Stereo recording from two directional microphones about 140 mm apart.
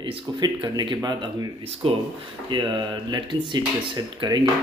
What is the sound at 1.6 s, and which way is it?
Speech, 45° right (ahead or behind).